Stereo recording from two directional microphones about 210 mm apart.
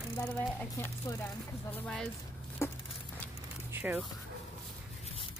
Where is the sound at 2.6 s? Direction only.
15° left (ahead or behind).